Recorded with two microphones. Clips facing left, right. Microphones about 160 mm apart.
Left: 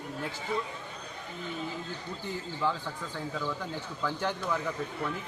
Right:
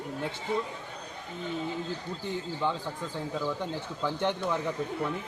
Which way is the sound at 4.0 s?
25° right (ahead or behind).